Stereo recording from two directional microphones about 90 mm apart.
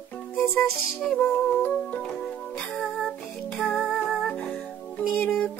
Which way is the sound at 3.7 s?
Centre (ahead or behind).